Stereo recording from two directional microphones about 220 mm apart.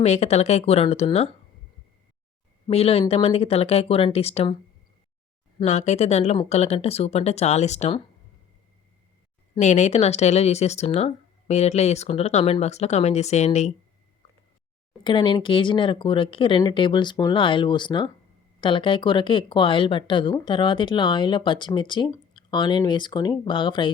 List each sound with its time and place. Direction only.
0.0 s speech: 30° left (ahead or behind)
2.6 s speech: 25° left (ahead or behind)
5.5 s speech: 30° left (ahead or behind)
9.6 s speech: 30° left (ahead or behind)
15.0 s speech: 20° left (ahead or behind)